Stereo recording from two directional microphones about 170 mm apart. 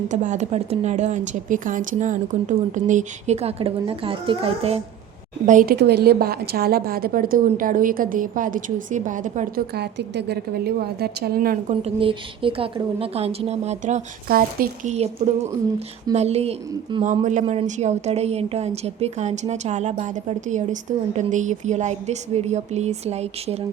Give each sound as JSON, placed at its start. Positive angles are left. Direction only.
{"t": 0.1, "sound": "speech", "side_deg": -45}
{"t": 5.5, "sound": "speech", "side_deg": -50}
{"t": 5.7, "sound": "a woman's voice", "side_deg": -75}
{"t": 9.7, "sound": "a woman's voice", "side_deg": -75}
{"t": 11.8, "sound": "a woman's voice", "side_deg": -30}
{"t": 14.3, "sound": "a woman's voice", "side_deg": -60}
{"t": 14.9, "sound": "a woman's voice", "side_deg": -40}